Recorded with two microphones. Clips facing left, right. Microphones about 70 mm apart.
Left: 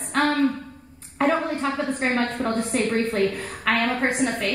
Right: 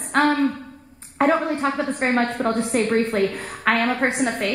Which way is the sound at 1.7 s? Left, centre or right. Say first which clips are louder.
Right 2 dB; centre.